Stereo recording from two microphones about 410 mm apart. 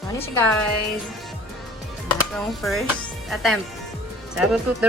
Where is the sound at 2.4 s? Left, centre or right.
Centre.